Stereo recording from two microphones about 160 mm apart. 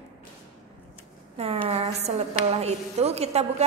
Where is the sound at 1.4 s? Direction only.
40° right (ahead or behind).